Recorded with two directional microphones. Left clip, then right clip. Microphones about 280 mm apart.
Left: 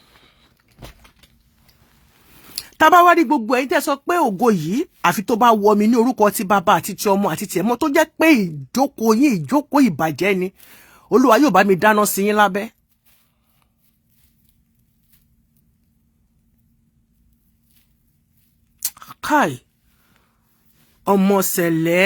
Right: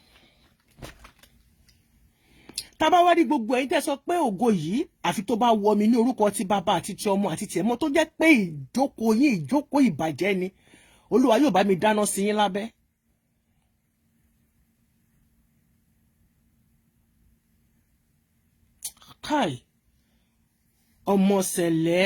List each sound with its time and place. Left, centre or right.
0.8 s vehicle: centre
2.6 s speech: centre
18.8 s a sound: centre
21.1 s speech: centre